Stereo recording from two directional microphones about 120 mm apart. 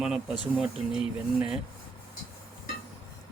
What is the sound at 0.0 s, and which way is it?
Speech, 10° right (ahead or behind).